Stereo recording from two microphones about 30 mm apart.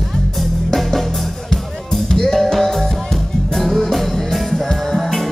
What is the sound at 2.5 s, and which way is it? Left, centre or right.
Music, centre.